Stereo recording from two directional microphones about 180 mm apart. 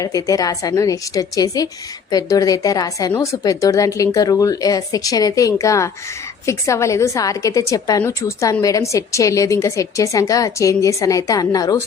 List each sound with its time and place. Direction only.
0.0 s a woman's voice: 20° left (ahead or behind)